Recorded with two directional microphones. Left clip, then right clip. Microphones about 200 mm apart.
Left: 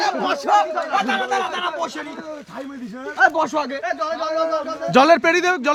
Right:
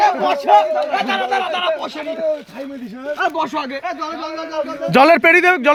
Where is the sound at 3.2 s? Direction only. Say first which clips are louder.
Left 3 dB; 20° left (ahead or behind).